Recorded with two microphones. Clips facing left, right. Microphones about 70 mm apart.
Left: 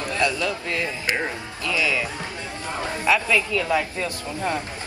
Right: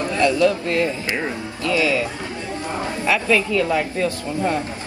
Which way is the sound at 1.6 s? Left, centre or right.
Right.